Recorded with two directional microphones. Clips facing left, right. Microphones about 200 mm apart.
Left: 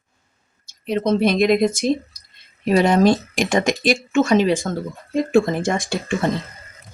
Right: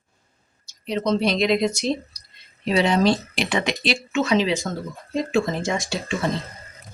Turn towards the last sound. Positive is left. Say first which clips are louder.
# left 3 dB
turn(degrees=55)  # may be behind; listen again after turning